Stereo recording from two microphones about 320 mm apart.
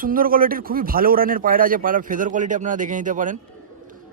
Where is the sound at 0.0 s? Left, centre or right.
Right.